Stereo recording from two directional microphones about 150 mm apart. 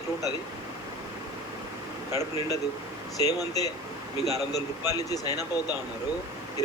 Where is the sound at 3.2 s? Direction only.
25° left (ahead or behind).